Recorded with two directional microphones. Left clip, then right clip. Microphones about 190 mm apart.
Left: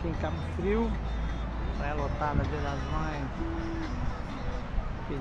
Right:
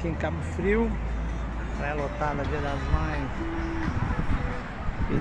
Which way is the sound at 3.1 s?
60° left (ahead or behind).